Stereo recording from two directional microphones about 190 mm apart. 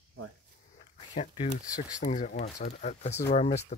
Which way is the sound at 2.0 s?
40° left (ahead or behind).